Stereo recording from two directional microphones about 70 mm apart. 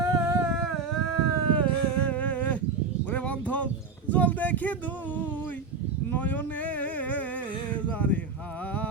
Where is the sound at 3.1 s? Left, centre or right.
Centre.